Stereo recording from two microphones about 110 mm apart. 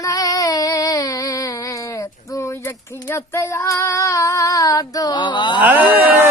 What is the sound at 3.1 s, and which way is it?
Female singing, 25° left (ahead or behind).